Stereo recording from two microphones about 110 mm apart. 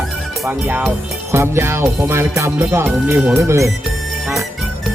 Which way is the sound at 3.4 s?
30° right (ahead or behind).